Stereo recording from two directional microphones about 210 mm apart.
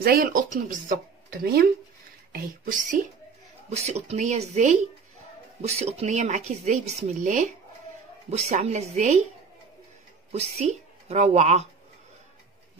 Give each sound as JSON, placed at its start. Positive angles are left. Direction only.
{"t": 0.0, "sound": "speech", "side_deg": -45}
{"t": 10.3, "sound": "speech", "side_deg": -30}